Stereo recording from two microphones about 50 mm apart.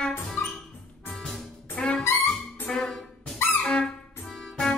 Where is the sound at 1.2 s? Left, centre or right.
Centre.